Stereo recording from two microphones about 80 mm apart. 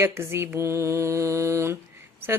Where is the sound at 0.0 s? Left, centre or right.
Right.